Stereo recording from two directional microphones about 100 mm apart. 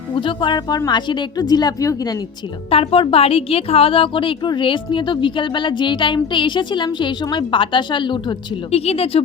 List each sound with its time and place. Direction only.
0.1 s a woman's voice: 55° left (ahead or behind); by 2.1 s 35° left (ahead or behind)
2.6 s a woman's voice: 70° left (ahead or behind); by 8.4 s 55° left (ahead or behind)
8.7 s speech: 90° left